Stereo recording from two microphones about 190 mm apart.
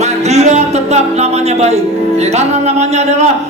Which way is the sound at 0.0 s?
35° right (ahead or behind).